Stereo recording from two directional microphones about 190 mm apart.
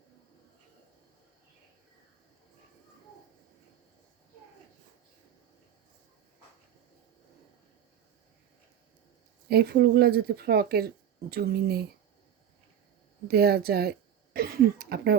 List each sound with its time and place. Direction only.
9.5 s speech: 55° right (ahead or behind)
13.2 s speech: 55° right (ahead or behind)